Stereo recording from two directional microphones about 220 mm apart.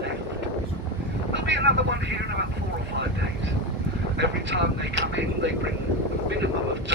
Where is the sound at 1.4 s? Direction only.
55° right (ahead or behind).